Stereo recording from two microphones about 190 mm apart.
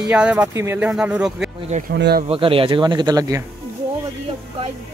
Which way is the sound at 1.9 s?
60° right (ahead or behind).